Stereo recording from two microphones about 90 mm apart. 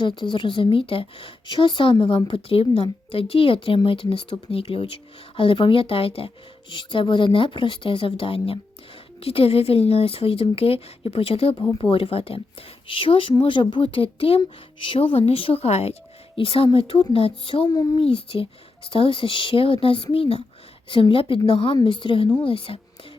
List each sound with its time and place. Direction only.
0.2 s speech: 65° left (ahead or behind); by 4.9 s 90° left
5.4 s speech: 70° left (ahead or behind)
13.4 s a woman's voice: 70° left (ahead or behind); by 20.1 s 90° left
20.9 s speech: 75° left (ahead or behind)
21.8 s a woman's voice: 60° left (ahead or behind)
22.4 s speech: 85° left